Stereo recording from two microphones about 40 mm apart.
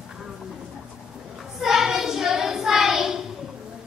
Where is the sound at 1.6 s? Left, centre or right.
Centre.